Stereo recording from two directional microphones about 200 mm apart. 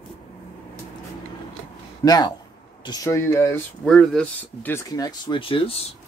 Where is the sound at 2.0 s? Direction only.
20° left (ahead or behind).